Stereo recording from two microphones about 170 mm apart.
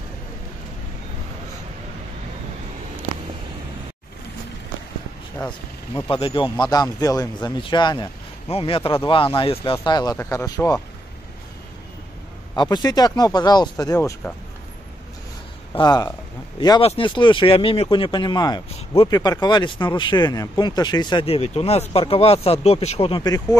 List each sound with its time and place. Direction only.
6.0 s speech: 30° left (ahead or behind)
12.5 s speech: 25° left (ahead or behind)
15.7 s speech: 25° left (ahead or behind)